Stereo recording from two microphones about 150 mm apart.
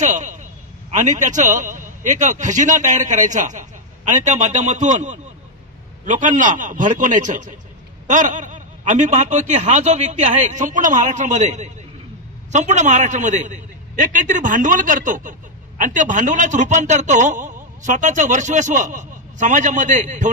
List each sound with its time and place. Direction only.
0.0 s a man's voice: 55° right (ahead or behind)